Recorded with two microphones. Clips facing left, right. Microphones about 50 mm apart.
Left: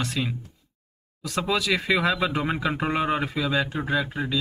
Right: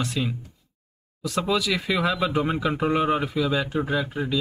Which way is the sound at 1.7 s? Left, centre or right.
Left.